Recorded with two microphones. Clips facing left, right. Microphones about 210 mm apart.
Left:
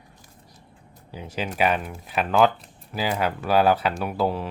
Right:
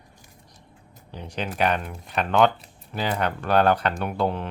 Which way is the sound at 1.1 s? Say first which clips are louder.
Left 1 dB; 5° left (ahead or behind).